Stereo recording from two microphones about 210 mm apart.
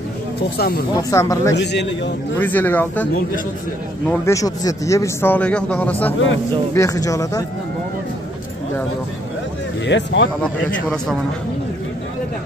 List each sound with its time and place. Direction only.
0.6 s speech: 45° left (ahead or behind)
1.1 s a man's voice: 15° left (ahead or behind)
1.5 s a man's voice: 55° left (ahead or behind)
2.3 s a man's voice: 10° left (ahead or behind)
4.1 s a man's voice: 15° left (ahead or behind)
9.8 s a man's voice: 55° left (ahead or behind)
10.4 s speech: 5° left (ahead or behind)